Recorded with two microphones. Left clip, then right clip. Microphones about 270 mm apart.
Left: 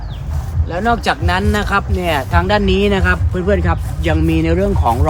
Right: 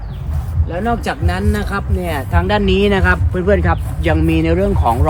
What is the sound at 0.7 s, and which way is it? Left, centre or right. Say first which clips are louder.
Speech: left 3 dB; centre.